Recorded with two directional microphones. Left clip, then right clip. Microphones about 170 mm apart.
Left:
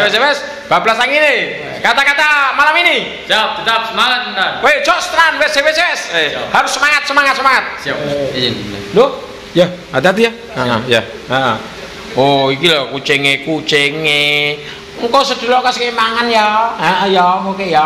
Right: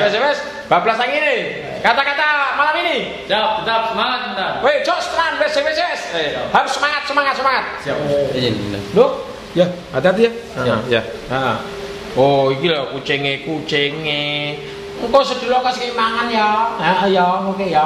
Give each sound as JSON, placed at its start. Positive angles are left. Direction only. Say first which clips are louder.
{"t": 0.0, "sound": "a man's voice", "louder": "left 4 dB", "side_deg": 35}
{"t": 3.3, "sound": "a man's voice", "louder": "left 4 dB", "side_deg": 5}
{"t": 4.6, "sound": "a man's voice", "louder": "left 4 dB", "side_deg": 30}
{"t": 9.0, "sound": "a man's voice", "louder": "left 3 dB", "side_deg": 40}